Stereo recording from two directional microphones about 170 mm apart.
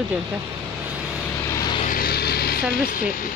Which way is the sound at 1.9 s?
65° left (ahead or behind).